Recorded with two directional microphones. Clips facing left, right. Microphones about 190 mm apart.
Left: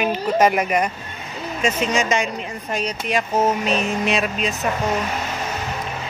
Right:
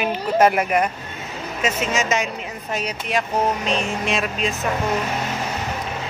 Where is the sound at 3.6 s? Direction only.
Centre (ahead or behind).